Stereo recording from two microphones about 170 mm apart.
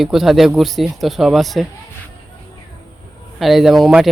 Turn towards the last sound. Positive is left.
turn(degrees=0)  # may be behind; listen again after turning